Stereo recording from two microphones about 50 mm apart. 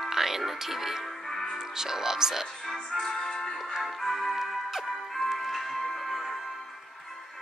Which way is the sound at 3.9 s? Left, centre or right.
Centre.